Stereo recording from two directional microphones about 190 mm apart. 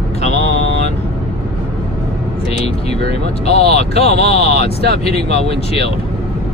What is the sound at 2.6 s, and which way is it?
Vehicle, 35° left (ahead or behind).